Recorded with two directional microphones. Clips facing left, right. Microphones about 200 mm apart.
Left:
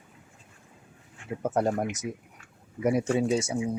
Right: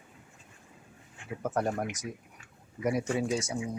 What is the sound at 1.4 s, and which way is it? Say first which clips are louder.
Speech: left 4 dB; 25° left (ahead or behind).